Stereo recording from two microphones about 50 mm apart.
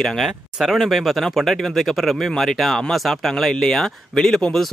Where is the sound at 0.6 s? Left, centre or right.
Centre.